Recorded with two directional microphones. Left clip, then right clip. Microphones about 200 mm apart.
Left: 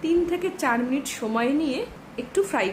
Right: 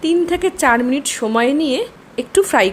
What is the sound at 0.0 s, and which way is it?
A woman's voice, 35° right (ahead or behind).